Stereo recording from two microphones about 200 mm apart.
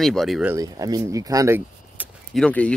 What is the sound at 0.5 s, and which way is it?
Speech, 15° right (ahead or behind).